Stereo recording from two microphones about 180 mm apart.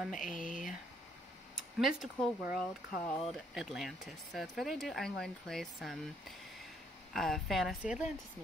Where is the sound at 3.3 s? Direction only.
Centre (ahead or behind).